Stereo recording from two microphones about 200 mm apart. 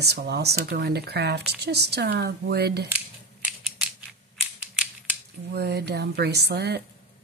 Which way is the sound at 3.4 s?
5° right (ahead or behind).